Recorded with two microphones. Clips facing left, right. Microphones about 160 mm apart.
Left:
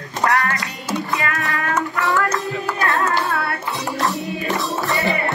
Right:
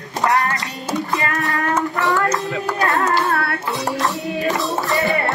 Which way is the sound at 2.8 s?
40° right (ahead or behind).